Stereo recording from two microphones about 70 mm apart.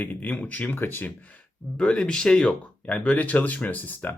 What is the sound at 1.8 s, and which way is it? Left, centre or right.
Speech, centre.